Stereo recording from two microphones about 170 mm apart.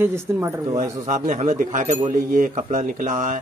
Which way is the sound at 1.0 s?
50° right (ahead or behind).